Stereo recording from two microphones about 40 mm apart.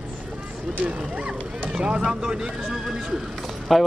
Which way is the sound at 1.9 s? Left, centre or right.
Right.